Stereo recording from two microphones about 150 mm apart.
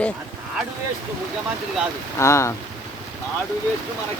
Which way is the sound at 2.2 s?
20° left (ahead or behind).